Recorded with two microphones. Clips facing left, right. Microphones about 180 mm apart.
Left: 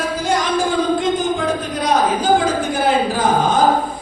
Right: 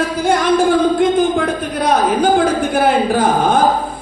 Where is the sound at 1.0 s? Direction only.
55° right (ahead or behind).